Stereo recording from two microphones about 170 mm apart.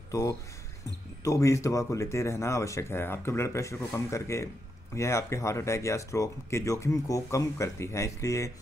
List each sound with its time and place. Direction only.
0.1 s speech: 20° left (ahead or behind)